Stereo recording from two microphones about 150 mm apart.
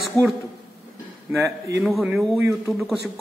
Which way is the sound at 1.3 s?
15° right (ahead or behind).